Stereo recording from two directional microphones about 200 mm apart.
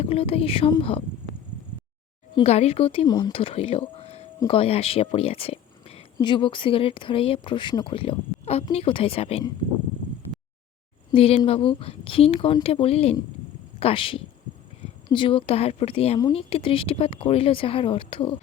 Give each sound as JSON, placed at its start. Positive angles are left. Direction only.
{"t": 0.0, "sound": "speech", "side_deg": 30}
{"t": 2.3, "sound": "speech", "side_deg": 30}
{"t": 11.1, "sound": "speech", "side_deg": 30}